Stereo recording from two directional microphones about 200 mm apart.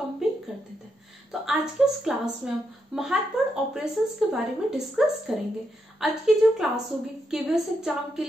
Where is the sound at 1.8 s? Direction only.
Centre (ahead or behind).